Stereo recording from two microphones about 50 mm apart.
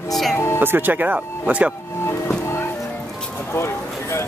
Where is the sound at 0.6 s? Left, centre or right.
Right.